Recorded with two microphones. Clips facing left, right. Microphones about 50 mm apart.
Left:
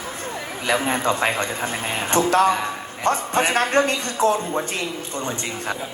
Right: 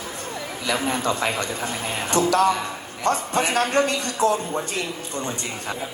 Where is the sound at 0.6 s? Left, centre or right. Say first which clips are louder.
Left 3 dB; left.